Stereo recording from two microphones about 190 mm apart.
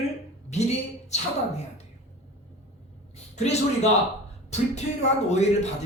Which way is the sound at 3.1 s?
35° left (ahead or behind).